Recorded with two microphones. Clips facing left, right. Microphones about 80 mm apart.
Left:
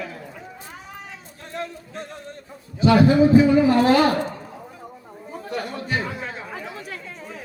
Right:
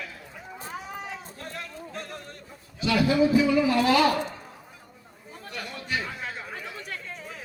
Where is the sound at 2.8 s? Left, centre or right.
Left.